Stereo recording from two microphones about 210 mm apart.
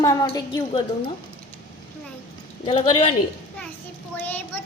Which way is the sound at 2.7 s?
25° left (ahead or behind).